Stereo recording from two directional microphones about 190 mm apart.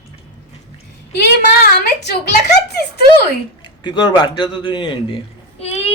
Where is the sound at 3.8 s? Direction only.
25° left (ahead or behind).